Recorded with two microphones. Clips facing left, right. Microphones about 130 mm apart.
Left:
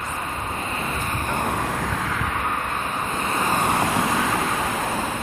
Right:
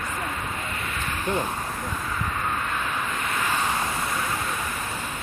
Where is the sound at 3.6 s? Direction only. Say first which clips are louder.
Left 5 dB; 55° left (ahead or behind).